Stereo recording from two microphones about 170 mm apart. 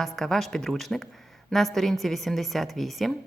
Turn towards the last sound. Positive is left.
turn(degrees=0)  # may be behind; listen again after turning